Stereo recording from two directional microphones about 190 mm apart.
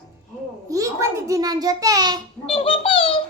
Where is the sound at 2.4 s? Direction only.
30° left (ahead or behind).